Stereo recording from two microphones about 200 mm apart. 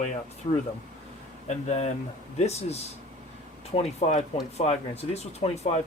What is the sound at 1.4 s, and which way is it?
Speech, 35° left (ahead or behind).